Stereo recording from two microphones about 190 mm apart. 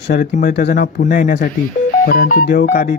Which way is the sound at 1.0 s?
45° left (ahead or behind).